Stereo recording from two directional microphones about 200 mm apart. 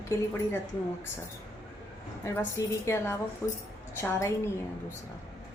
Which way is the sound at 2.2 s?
15° left (ahead or behind).